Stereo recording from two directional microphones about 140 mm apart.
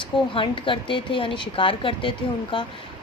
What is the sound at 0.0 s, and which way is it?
A woman's voice, 35° left (ahead or behind).